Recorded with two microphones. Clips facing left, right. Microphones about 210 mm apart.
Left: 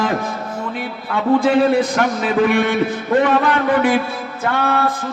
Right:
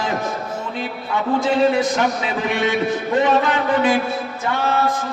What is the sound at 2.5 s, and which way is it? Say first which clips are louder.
Speech: left 4 dB; 55° left (ahead or behind).